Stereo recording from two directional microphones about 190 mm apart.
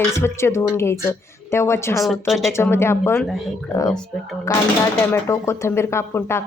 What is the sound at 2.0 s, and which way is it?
Speech, centre (ahead or behind).